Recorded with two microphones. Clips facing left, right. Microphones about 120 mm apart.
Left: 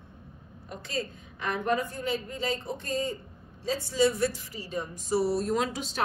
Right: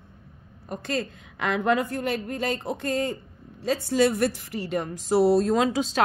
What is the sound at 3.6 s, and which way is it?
A woman's voice, 70° right (ahead or behind).